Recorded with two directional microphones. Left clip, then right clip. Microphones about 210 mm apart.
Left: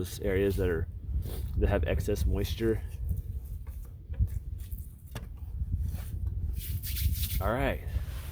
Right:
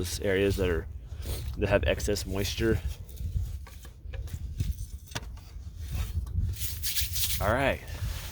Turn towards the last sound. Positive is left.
turn(degrees=-20)  # may be behind; listen again after turning